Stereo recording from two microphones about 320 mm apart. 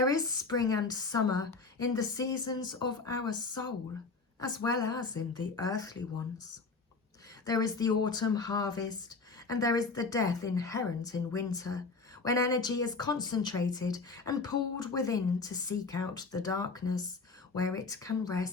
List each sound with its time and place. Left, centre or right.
0.0 s speech: centre
4.4 s speech: centre
7.4 s speech: centre